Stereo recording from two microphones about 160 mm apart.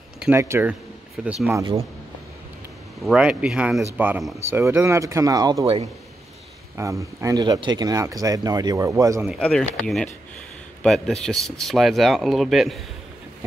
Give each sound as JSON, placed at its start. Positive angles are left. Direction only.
{"t": 0.2, "sound": "speech", "side_deg": -15}
{"t": 1.5, "sound": "speech", "side_deg": -25}
{"t": 3.0, "sound": "speech", "side_deg": 0}
{"t": 6.8, "sound": "speech", "side_deg": -20}
{"t": 9.4, "sound": "speech", "side_deg": 5}